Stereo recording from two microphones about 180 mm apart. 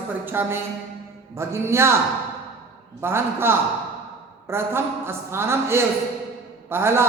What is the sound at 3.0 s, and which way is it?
A woman's voice, 15° right (ahead or behind).